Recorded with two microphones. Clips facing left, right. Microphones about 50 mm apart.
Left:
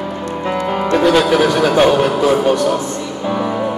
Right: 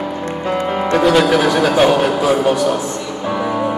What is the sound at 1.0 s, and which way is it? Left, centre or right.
Music, centre.